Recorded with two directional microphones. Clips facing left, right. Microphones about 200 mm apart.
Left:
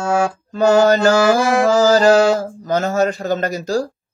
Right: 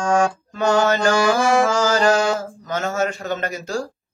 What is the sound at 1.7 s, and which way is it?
Speech, 35° left (ahead or behind).